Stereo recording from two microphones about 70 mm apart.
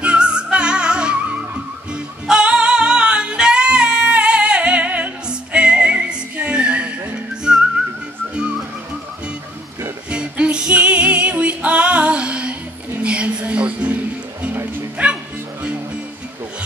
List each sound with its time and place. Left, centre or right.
0.0 s music: centre
10.0 s music: centre
15.0 s bow-wow: centre